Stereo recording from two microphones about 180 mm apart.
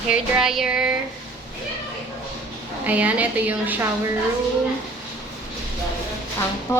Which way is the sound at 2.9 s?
10° right (ahead or behind).